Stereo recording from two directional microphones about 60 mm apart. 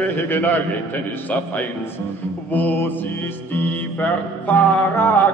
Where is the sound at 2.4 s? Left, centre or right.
Left.